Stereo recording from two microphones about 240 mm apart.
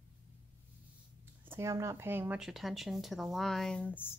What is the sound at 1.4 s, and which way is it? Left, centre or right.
Speech, centre.